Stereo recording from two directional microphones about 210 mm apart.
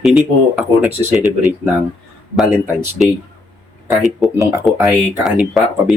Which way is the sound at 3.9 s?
Centre (ahead or behind).